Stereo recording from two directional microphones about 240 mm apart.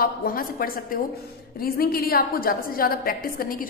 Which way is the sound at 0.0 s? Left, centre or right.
Left.